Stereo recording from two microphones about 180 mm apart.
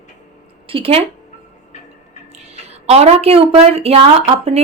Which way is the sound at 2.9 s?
35° right (ahead or behind).